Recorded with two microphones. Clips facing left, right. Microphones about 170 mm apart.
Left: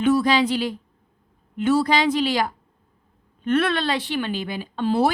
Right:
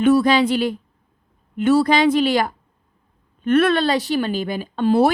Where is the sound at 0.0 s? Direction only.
55° right (ahead or behind).